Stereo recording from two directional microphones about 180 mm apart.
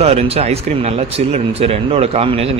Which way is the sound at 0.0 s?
35° right (ahead or behind).